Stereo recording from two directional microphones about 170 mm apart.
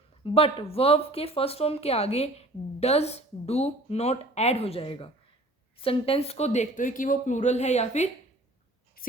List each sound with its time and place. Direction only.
0.3 s speech: 35° left (ahead or behind)
9.0 s writing: 60° left (ahead or behind)